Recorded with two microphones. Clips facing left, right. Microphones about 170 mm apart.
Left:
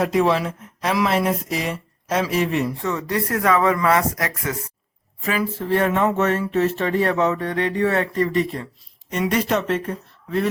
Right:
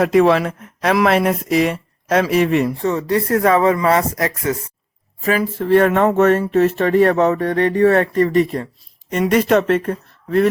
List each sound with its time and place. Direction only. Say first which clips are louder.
0.0 s speech: right 6 dB; 65° right (ahead or behind)
2.8 s speech: right 6 dB; 30° right (ahead or behind)
5.2 s speech: right 5 dB; 40° right (ahead or behind)
5.6 s speech: right 7 dB; 65° right (ahead or behind)